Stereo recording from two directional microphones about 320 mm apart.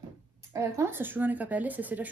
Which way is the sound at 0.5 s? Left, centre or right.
Centre.